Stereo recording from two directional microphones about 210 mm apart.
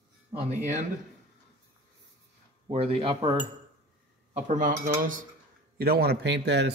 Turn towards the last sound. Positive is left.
turn(degrees=-55)  # may be behind; listen again after turning